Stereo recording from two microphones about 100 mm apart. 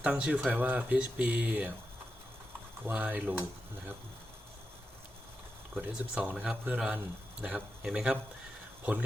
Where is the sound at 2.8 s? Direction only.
15° right (ahead or behind).